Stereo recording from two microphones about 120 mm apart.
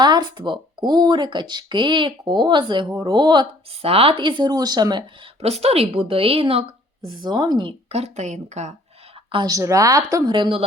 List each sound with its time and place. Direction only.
0.0 s speech: 35° right (ahead or behind)
3.8 s speech: 55° right (ahead or behind); by 5.3 s 40° right (ahead or behind)
5.4 s a woman's voice: 60° right (ahead or behind)
7.9 s a woman's voice: 65° right (ahead or behind)
9.5 s a woman's voice: 30° right (ahead or behind)
10.3 s a woman's voice: 40° right (ahead or behind)